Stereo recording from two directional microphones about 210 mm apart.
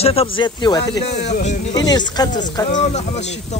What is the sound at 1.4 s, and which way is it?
Speech, 35° left (ahead or behind).